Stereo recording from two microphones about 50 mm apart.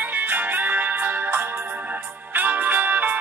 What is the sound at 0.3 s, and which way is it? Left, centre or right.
Music, right.